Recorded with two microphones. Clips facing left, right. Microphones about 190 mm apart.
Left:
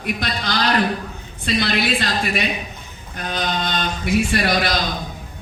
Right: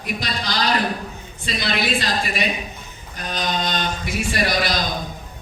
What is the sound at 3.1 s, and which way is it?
Mantra, 55° left (ahead or behind).